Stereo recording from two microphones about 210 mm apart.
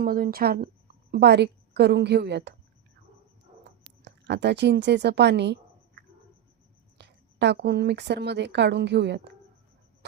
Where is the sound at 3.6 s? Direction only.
55° right (ahead or behind).